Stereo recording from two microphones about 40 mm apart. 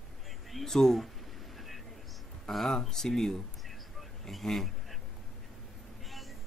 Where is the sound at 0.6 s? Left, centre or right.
Centre.